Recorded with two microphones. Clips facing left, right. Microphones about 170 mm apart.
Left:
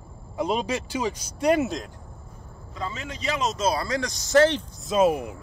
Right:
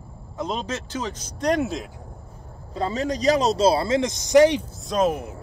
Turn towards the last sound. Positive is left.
turn(degrees=10)  # may be behind; listen again after turning